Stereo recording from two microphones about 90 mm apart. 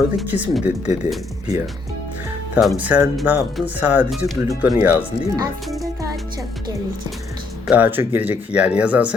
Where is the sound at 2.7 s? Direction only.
20° right (ahead or behind).